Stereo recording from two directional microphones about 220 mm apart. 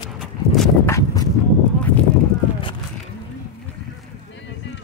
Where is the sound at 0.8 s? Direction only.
15° left (ahead or behind).